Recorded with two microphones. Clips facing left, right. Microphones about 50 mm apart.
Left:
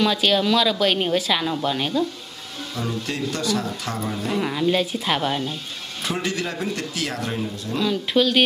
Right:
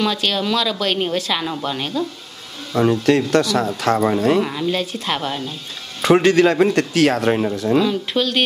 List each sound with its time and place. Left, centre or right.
0.0 s speech: centre
2.8 s speech: right
4.4 s speech: centre
6.0 s speech: right
7.5 s speech: right
7.8 s speech: centre